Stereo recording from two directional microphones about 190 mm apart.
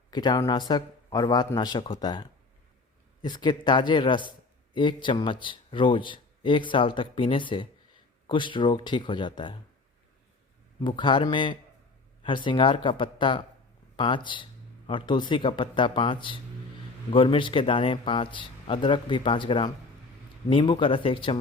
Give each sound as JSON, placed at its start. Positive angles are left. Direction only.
{"t": 0.1, "sound": "a man's voice", "side_deg": 20}
{"t": 10.8, "sound": "a man's voice", "side_deg": 25}